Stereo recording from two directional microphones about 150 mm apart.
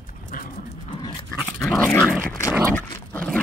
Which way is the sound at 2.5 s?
15° right (ahead or behind).